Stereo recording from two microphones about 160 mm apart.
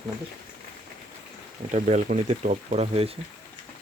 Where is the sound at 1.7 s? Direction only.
50° right (ahead or behind).